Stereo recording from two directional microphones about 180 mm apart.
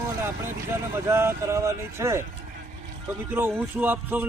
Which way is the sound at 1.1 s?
15° right (ahead or behind).